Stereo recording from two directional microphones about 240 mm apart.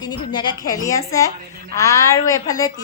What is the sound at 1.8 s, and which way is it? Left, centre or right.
Child singing, centre.